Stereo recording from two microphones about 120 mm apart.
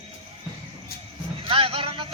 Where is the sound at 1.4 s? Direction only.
50° right (ahead or behind).